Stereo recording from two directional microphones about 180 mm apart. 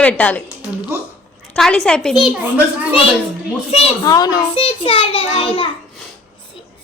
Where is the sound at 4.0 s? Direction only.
20° left (ahead or behind).